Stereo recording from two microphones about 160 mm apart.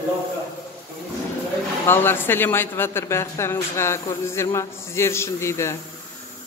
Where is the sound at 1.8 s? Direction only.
15° left (ahead or behind).